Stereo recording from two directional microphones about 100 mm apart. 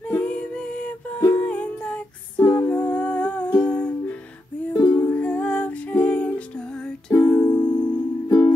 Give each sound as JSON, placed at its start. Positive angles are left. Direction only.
{"t": 0.1, "sound": "music", "side_deg": 10}
{"t": 2.4, "sound": "music", "side_deg": 25}
{"t": 2.7, "sound": "humming", "side_deg": 15}
{"t": 4.8, "sound": "music", "side_deg": 15}
{"t": 8.3, "sound": "music", "side_deg": 25}